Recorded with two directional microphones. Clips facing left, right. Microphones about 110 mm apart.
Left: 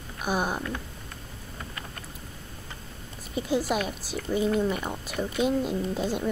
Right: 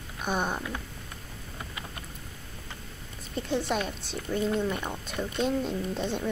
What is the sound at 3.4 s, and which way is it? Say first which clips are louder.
A woman's voice: left 2 dB; 5° left (ahead or behind).